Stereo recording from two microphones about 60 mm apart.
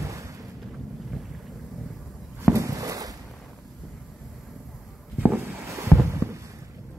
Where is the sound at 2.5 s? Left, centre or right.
Right.